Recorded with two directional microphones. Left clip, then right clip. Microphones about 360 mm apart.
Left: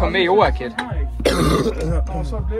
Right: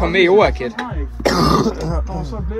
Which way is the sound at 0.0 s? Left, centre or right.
Centre.